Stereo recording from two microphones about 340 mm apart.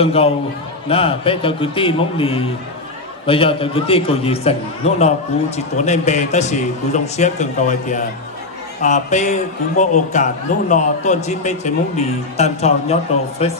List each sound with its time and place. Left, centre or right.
0.0 s a man's voice: centre